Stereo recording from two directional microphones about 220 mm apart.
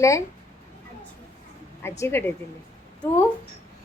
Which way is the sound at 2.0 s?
10° left (ahead or behind).